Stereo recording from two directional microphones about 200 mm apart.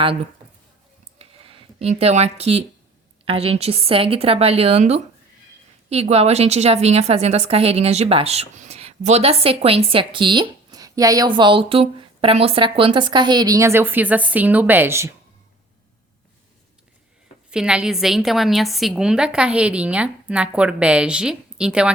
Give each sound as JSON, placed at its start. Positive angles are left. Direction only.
{"t": 0.0, "sound": "a woman's voice", "side_deg": -25}
{"t": 1.2, "sound": "a sound", "side_deg": -30}
{"t": 3.2, "sound": "a woman's voice", "side_deg": -30}
{"t": 17.5, "sound": "a woman's voice", "side_deg": -5}